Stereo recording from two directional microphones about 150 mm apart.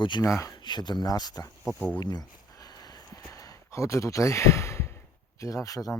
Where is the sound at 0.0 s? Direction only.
30° left (ahead or behind).